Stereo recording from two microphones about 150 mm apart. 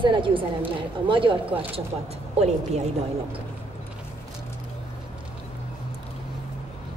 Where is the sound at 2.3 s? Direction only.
45° right (ahead or behind).